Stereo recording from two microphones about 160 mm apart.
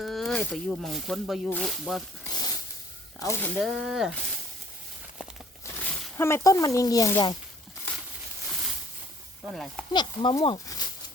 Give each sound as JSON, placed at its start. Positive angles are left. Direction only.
{"t": 0.0, "sound": "speech", "side_deg": 0}
{"t": 2.3, "sound": "a sound", "side_deg": 25}
{"t": 3.2, "sound": "speech", "side_deg": 15}
{"t": 3.6, "sound": "speech", "side_deg": -5}
{"t": 6.1, "sound": "speech", "side_deg": 15}
{"t": 9.5, "sound": "speech", "side_deg": 0}
{"t": 9.9, "sound": "speech", "side_deg": 25}